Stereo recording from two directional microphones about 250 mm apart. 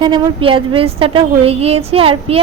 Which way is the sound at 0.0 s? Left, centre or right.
Centre.